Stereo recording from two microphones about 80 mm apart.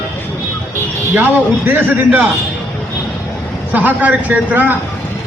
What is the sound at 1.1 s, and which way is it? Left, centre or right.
A man's voice, right.